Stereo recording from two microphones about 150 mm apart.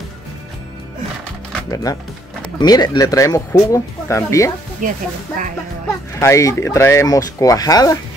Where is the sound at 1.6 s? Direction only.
25° left (ahead or behind).